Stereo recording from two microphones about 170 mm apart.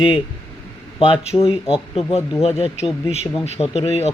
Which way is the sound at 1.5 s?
5° right (ahead or behind).